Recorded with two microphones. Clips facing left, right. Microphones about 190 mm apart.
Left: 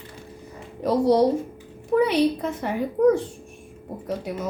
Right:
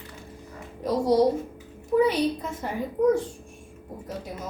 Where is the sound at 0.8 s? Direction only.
65° left (ahead or behind).